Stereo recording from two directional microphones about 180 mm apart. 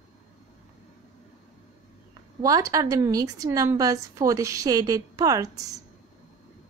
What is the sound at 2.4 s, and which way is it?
A woman's voice, 20° right (ahead or behind).